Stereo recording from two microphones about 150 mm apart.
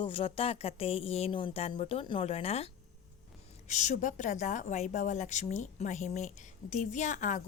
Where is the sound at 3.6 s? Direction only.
50° left (ahead or behind).